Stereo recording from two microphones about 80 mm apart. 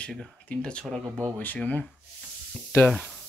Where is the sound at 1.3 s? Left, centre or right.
Left.